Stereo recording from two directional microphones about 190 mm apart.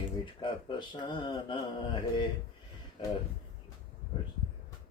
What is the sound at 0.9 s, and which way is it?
Speech, 25° left (ahead or behind).